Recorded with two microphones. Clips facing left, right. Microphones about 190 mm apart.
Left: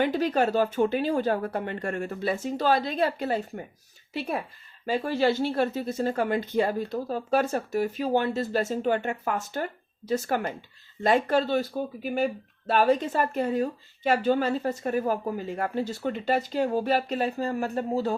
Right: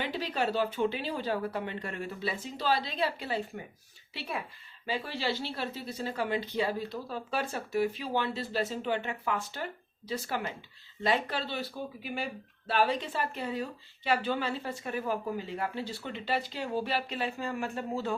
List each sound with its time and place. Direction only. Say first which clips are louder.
0.0 s speech: left 8 dB; 45° left (ahead or behind)